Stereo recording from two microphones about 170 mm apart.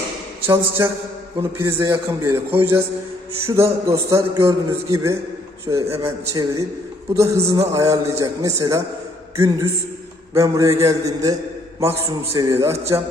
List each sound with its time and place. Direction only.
0.4 s a man's voice: 15° right (ahead or behind)
10.3 s a man's voice: 20° right (ahead or behind)